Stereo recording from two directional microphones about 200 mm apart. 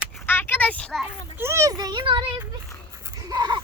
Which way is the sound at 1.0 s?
10° right (ahead or behind).